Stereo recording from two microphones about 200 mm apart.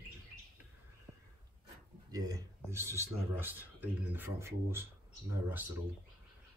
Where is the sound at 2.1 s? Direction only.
20° right (ahead or behind).